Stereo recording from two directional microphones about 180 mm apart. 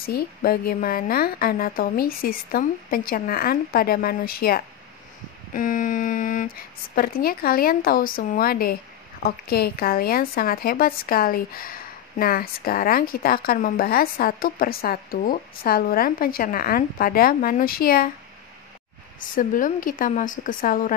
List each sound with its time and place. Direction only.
0.0 s a woman's voice: 55° left (ahead or behind)
19.1 s a woman's voice: 50° left (ahead or behind)